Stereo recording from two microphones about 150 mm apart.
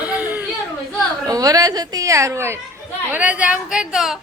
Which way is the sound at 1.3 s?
25° right (ahead or behind).